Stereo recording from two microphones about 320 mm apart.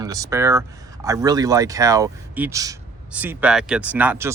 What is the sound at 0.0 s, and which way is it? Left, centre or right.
Speech, centre.